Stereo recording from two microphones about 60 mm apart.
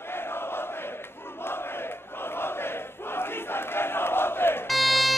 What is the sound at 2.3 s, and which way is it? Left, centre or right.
Crowd, left.